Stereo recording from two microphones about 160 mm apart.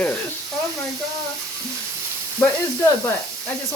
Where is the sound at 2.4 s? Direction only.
15° left (ahead or behind).